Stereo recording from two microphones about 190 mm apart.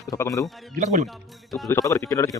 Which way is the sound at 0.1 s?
15° left (ahead or behind).